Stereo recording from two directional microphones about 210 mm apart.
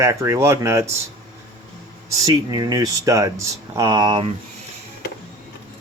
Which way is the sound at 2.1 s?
20° right (ahead or behind).